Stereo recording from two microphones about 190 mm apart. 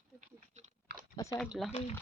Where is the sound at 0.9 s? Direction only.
60° right (ahead or behind).